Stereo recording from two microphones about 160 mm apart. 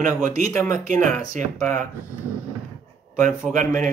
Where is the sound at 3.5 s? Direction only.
50° right (ahead or behind).